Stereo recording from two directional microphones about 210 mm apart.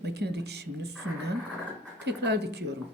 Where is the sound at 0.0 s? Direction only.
55° right (ahead or behind).